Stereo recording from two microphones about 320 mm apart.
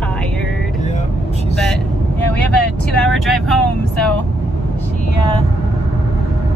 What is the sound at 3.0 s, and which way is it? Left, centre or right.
Speech, centre.